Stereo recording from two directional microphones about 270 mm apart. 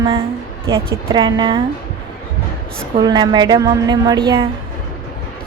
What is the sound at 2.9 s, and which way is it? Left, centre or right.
A woman's voice, centre.